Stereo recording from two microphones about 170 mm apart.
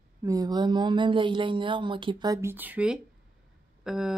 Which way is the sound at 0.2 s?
20° right (ahead or behind).